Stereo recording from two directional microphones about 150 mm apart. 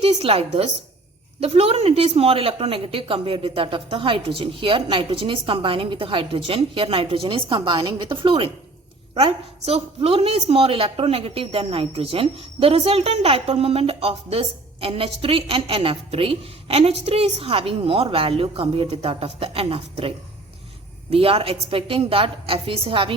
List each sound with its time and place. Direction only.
0.0 s a woman's voice: 40° right (ahead or behind)